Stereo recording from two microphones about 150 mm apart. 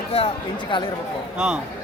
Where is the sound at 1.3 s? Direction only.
5° right (ahead or behind).